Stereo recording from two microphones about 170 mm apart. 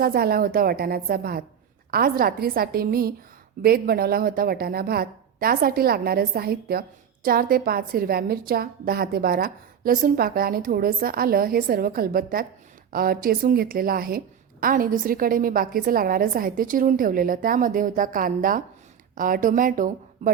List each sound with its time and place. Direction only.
0.0 s a woman's voice: 65° right (ahead or behind)